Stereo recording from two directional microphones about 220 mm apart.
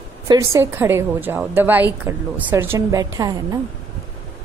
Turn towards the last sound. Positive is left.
turn(degrees=-15)  # may be behind; listen again after turning